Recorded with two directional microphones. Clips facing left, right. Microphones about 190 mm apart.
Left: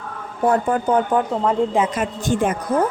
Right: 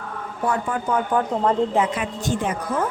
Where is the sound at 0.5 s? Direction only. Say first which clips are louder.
Left 5 dB; 35° left (ahead or behind).